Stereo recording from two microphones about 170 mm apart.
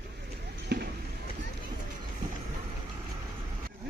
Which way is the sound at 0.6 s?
70° right (ahead or behind).